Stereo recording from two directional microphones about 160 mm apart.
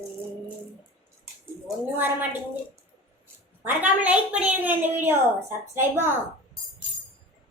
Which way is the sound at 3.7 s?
10° right (ahead or behind).